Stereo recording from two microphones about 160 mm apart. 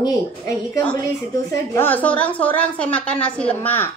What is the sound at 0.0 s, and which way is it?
Speech, 25° left (ahead or behind).